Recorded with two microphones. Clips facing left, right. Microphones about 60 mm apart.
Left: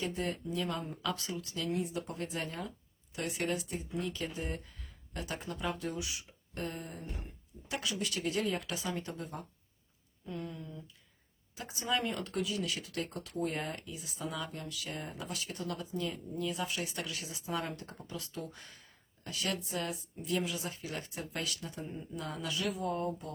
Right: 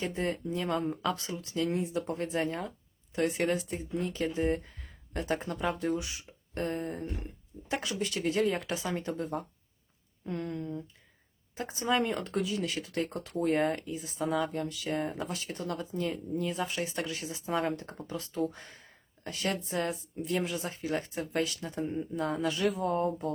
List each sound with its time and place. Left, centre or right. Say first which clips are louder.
0.0 s speech: right 4 dB; right
10.2 s speech: right 7 dB; right
11.5 s speech: right 5 dB; right